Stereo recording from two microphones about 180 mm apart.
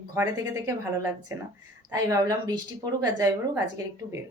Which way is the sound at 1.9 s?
20° right (ahead or behind).